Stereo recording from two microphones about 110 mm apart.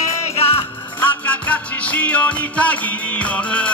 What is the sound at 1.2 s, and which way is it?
Music, 15° left (ahead or behind).